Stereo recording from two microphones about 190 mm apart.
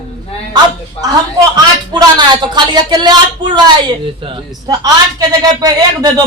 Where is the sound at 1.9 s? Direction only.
25° right (ahead or behind).